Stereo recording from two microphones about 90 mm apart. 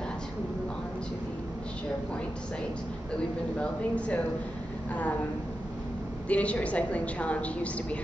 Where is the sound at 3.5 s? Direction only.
15° left (ahead or behind).